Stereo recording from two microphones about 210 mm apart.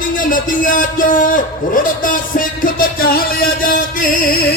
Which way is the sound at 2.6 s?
45° left (ahead or behind).